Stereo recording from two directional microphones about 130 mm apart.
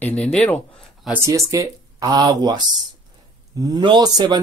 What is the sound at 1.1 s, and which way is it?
A man's voice, 20° right (ahead or behind).